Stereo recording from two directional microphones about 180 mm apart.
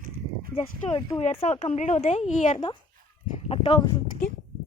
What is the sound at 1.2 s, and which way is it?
A woman's voice, 35° left (ahead or behind).